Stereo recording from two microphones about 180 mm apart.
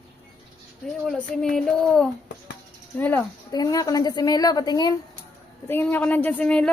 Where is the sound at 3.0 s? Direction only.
10° left (ahead or behind).